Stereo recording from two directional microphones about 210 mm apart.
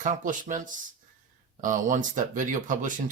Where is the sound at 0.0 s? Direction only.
35° right (ahead or behind).